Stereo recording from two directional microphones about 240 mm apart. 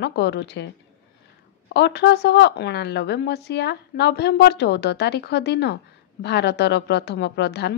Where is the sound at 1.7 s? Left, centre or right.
Left.